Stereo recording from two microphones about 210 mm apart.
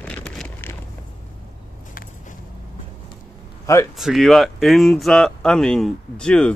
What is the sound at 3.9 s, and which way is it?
Speech, centre (ahead or behind).